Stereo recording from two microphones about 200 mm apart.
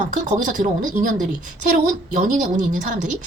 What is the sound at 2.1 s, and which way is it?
A woman's voice, 40° right (ahead or behind).